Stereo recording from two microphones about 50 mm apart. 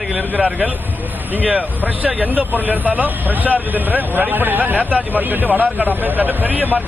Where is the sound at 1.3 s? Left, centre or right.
Right.